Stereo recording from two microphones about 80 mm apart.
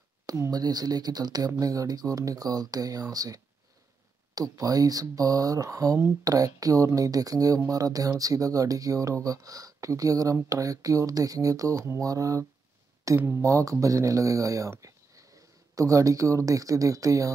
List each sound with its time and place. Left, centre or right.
0.5 s speech: right
4.4 s speech: right